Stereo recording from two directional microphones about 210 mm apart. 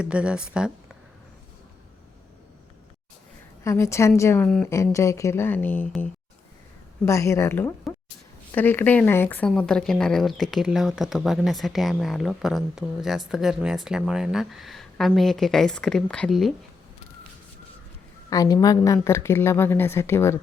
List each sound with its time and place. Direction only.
0.0 s speech: 5° right (ahead or behind)
3.6 s speech: 15° left (ahead or behind)
18.3 s speech: 15° left (ahead or behind)